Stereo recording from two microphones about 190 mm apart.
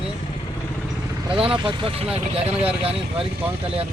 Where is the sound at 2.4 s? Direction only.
5° right (ahead or behind).